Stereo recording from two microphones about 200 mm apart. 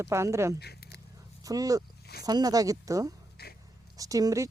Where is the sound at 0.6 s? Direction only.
55° left (ahead or behind).